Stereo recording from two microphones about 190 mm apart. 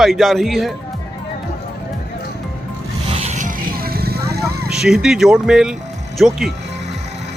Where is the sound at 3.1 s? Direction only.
40° right (ahead or behind); by 4.4 s 55° right (ahead or behind).